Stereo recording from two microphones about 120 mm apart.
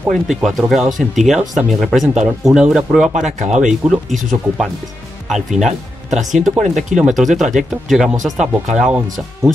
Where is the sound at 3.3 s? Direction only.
70° right (ahead or behind).